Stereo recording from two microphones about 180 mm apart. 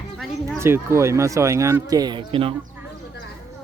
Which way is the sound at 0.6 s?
15° right (ahead or behind).